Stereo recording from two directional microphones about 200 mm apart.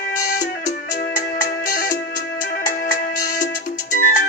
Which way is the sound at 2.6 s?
40° left (ahead or behind).